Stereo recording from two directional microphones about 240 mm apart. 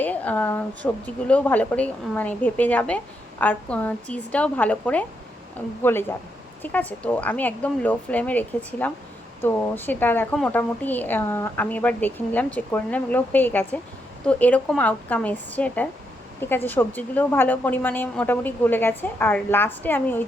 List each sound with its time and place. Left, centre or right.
0.0 s a woman's voice: centre